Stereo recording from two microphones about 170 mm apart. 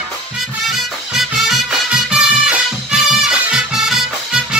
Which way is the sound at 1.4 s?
Centre (ahead or behind).